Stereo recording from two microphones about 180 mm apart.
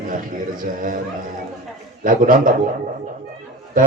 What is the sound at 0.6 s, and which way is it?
Speech, 50° right (ahead or behind).